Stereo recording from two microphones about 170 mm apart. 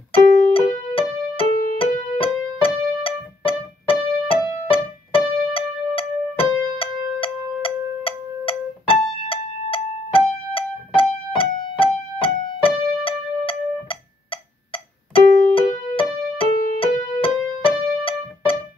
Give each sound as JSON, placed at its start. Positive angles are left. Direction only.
{"t": 0.5, "sound": "music", "side_deg": 35}